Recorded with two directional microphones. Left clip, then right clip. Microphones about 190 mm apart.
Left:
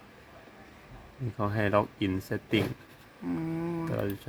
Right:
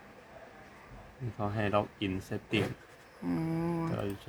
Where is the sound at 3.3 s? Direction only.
5° right (ahead or behind).